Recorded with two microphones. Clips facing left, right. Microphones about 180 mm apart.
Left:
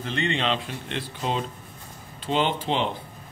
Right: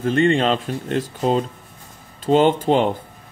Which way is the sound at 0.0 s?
45° right (ahead or behind).